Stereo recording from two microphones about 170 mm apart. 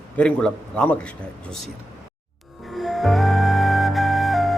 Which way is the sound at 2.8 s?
Centre (ahead or behind).